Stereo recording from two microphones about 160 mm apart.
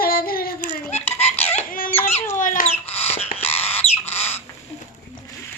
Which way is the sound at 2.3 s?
55° left (ahead or behind).